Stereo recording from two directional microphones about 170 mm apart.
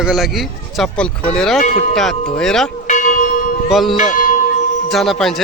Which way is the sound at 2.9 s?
50° left (ahead or behind).